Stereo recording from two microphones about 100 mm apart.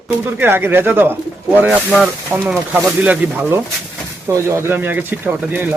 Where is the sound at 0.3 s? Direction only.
20° right (ahead or behind).